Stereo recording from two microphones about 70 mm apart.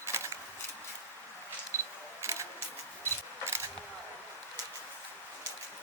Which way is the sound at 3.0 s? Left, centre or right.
Right.